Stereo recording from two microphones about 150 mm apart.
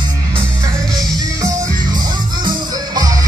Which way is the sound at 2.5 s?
25° right (ahead or behind).